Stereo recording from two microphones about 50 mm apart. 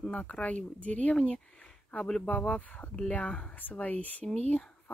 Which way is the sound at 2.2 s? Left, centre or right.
Left.